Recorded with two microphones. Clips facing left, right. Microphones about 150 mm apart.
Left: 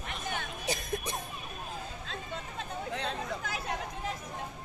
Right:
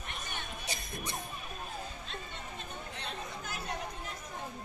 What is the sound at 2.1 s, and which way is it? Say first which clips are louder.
Chatter: left 4 dB; 90° left.